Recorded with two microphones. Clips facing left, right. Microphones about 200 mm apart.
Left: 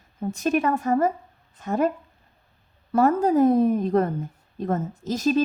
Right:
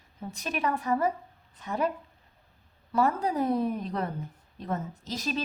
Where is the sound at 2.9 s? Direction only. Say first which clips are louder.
Left 8 dB; 50° left (ahead or behind).